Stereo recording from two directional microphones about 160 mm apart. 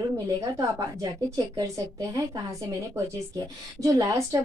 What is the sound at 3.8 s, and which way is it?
Speech, 20° right (ahead or behind).